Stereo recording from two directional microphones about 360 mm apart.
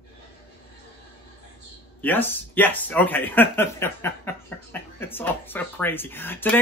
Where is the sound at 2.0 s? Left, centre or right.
Centre.